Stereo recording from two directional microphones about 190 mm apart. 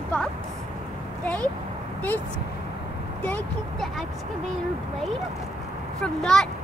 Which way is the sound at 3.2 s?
5° left (ahead or behind).